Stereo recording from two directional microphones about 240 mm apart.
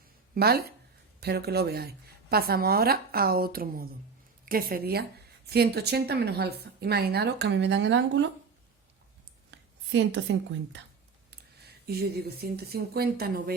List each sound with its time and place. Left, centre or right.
0.3 s a woman's voice: right
9.5 s a woman's voice: right
11.9 s a woman's voice: right